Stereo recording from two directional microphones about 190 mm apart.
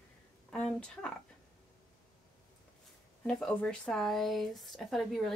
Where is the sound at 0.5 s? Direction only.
5° left (ahead or behind).